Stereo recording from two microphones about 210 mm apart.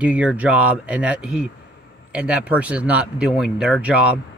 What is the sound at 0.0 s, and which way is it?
Speech, 5° right (ahead or behind).